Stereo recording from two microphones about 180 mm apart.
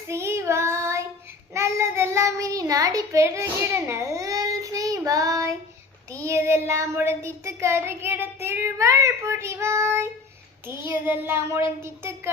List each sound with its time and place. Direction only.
0.1 s child singing: 15° right (ahead or behind)